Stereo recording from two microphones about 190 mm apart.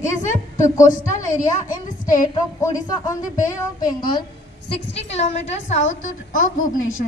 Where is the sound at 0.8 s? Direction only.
45° left (ahead or behind).